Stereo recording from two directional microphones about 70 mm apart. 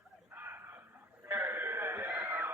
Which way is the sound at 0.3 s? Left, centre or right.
Right.